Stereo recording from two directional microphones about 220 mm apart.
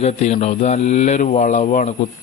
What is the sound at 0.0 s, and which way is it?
Speech, 30° left (ahead or behind).